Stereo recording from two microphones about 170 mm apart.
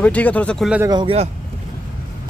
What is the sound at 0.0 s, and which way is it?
Speech, 10° left (ahead or behind).